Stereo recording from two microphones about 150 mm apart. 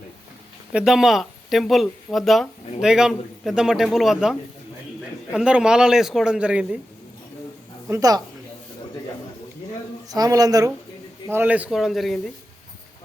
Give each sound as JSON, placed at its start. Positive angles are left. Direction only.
{"t": 0.7, "sound": "speech", "side_deg": -5}
{"t": 7.9, "sound": "speech", "side_deg": -20}
{"t": 10.1, "sound": "speech", "side_deg": -25}
{"t": 11.3, "sound": "speech", "side_deg": -10}